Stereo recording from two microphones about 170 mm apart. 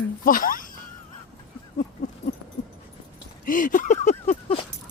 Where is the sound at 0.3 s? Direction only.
55° left (ahead or behind).